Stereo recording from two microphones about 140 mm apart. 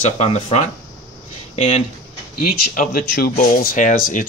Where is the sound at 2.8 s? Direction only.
90° left; by 4.2 s 70° left (ahead or behind).